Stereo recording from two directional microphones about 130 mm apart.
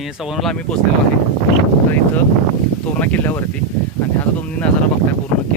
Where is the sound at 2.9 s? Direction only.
10° left (ahead or behind).